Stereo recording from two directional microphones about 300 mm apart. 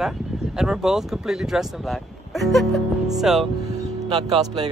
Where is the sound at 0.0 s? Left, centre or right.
Centre.